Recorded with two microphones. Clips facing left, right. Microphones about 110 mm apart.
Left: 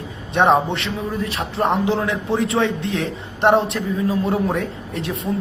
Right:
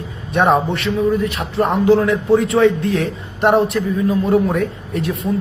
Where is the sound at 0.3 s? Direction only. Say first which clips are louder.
Right 1 dB; 25° left (ahead or behind).